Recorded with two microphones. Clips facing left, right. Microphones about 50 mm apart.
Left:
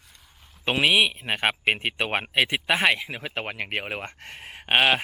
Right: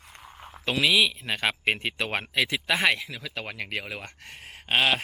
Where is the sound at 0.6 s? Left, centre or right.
Left.